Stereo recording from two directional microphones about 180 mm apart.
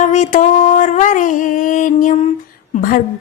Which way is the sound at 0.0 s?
40° left (ahead or behind).